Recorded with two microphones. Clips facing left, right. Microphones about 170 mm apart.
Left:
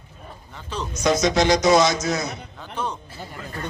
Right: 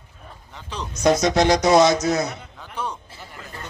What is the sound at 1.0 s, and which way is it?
Speech, 55° right (ahead or behind).